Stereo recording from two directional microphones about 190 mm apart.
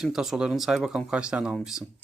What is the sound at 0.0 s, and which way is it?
Speech, centre (ahead or behind).